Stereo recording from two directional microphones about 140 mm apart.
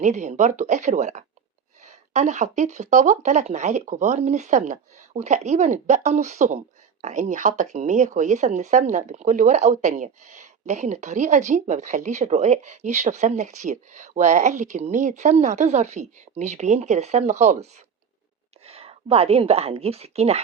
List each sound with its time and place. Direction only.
0.0 s speech: 55° right (ahead or behind)
18.6 s a woman's voice: 45° right (ahead or behind)